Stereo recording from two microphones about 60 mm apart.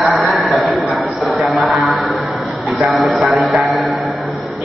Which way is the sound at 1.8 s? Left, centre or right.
Centre.